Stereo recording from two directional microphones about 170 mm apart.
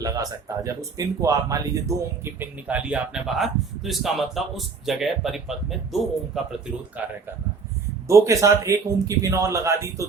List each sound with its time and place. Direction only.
0.0 s speech: 20° right (ahead or behind)